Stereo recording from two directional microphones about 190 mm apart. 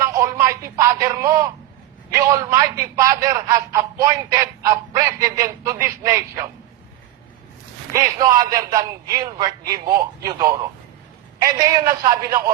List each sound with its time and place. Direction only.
0.0 s speech: 15° right (ahead or behind)
7.9 s a man's voice: 20° right (ahead or behind)